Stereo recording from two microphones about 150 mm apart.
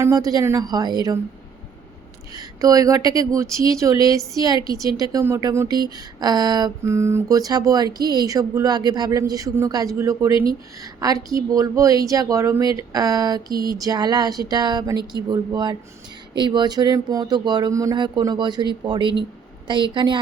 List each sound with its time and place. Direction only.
0.0 s speech: 20° right (ahead or behind)
2.3 s a woman's voice: 25° right (ahead or behind)